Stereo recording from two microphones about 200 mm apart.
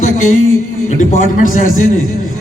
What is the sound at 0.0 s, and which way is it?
A man's voice, 40° left (ahead or behind).